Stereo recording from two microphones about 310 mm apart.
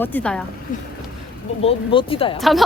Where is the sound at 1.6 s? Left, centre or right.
Centre.